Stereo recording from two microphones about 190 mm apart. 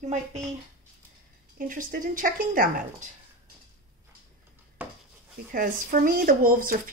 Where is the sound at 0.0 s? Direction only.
35° right (ahead or behind).